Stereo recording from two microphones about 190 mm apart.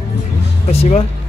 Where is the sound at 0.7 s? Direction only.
30° left (ahead or behind).